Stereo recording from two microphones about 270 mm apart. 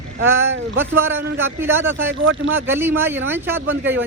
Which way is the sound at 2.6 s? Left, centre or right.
Centre.